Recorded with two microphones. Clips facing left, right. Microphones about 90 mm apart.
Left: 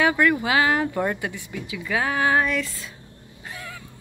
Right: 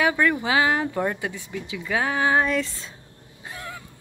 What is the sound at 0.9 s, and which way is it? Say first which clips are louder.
Speech: left 1 dB; 10° right (ahead or behind).